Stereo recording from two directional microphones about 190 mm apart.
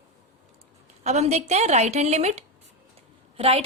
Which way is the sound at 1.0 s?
35° right (ahead or behind).